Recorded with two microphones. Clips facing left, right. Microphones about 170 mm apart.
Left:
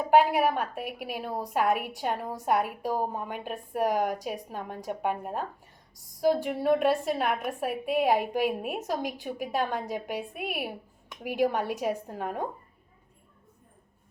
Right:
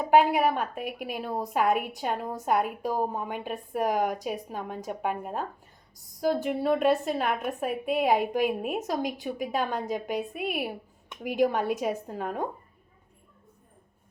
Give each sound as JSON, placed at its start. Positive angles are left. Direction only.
{"t": 0.2, "sound": "a woman's voice", "side_deg": 0}